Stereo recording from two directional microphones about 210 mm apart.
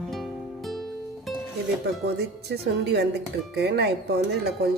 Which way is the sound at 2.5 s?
50° right (ahead or behind).